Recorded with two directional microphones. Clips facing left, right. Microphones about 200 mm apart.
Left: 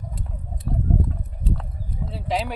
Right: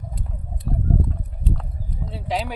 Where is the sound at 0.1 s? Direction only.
Centre (ahead or behind).